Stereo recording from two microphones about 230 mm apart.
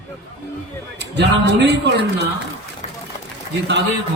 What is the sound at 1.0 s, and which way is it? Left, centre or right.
Speech, right.